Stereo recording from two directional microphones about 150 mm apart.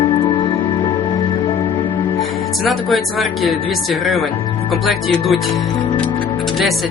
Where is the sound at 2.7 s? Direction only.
Centre (ahead or behind).